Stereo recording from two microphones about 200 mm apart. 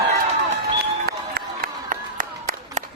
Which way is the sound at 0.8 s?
50° right (ahead or behind).